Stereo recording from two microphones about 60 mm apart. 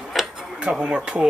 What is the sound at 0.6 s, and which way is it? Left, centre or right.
Speech, centre.